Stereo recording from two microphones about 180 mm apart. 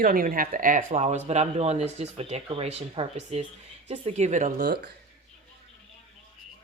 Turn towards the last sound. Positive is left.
turn(degrees=-60)  # may be behind; listen again after turning